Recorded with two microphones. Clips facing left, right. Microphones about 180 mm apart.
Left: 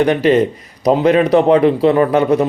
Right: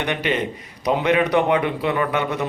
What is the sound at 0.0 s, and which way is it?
Speech, 35° left (ahead or behind).